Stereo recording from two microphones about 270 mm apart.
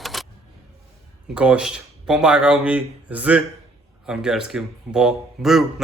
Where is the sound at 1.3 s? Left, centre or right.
Centre.